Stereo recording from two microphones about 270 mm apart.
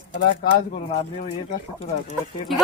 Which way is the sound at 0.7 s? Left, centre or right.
Left.